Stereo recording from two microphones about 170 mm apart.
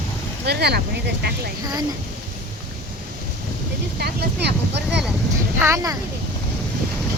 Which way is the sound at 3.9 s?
75° right (ahead or behind).